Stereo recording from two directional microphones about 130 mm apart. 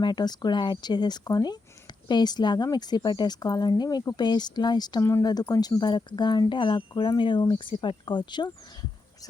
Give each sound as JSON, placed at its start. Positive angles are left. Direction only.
{"t": 0.0, "sound": "speech", "side_deg": 35}